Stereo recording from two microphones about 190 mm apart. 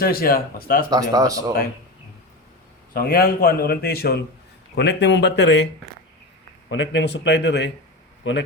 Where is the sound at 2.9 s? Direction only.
50° left (ahead or behind).